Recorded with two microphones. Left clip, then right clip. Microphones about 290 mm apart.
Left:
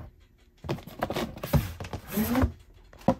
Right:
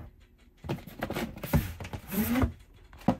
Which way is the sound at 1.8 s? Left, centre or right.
Centre.